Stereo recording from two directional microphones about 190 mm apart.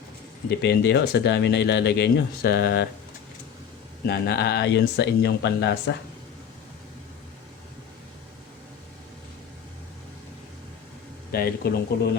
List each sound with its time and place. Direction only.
0.4 s speech: 60° left (ahead or behind)
4.0 s speech: 60° left (ahead or behind)
11.3 s speech: 55° left (ahead or behind)